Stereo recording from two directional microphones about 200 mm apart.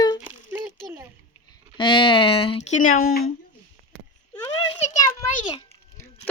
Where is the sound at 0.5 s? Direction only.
10° right (ahead or behind).